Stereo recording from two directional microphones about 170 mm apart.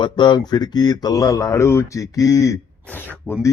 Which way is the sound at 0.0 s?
25° left (ahead or behind).